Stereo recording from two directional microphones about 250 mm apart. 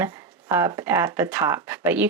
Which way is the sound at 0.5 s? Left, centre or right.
Centre.